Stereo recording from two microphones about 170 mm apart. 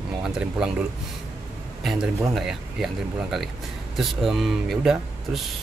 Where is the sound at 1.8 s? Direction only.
Centre (ahead or behind).